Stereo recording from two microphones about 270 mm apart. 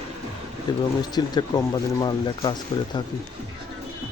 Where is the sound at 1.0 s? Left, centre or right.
Centre.